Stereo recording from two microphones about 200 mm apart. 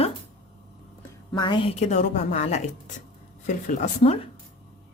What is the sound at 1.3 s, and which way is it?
Speech, 25° left (ahead or behind).